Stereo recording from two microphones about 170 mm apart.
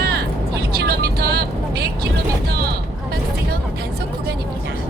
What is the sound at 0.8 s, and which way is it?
Vehicle, 70° right (ahead or behind).